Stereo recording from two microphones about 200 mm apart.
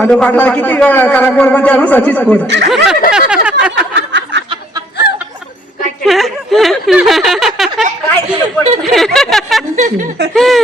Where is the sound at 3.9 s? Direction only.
60° right (ahead or behind).